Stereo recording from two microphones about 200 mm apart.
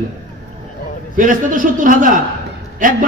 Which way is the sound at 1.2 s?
40° right (ahead or behind).